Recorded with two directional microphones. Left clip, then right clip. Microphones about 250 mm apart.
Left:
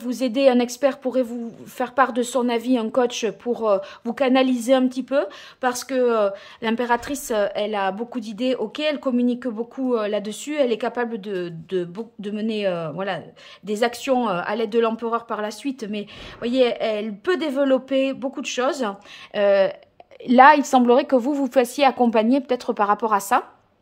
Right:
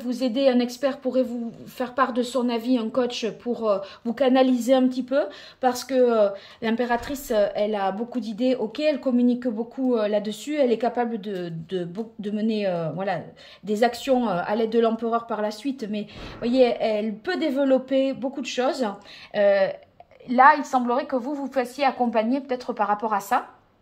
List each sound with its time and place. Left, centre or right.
0.0 s a woman's voice: centre
20.2 s a woman's voice: left